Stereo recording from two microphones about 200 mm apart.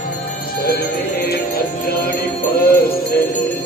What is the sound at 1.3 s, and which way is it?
Music, 50° left (ahead or behind).